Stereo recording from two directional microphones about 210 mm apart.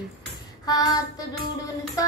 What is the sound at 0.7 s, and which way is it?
Music, 15° left (ahead or behind).